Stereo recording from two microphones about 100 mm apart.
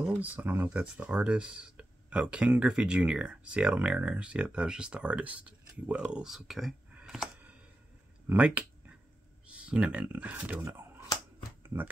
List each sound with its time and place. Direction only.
0.2 s speech: 15° right (ahead or behind)
8.3 s speech: 15° right (ahead or behind)
10.6 s speech: 25° right (ahead or behind)
11.6 s shuffling cards: 20° right (ahead or behind)